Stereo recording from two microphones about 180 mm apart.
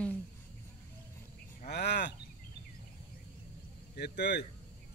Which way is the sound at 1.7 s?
65° left (ahead or behind).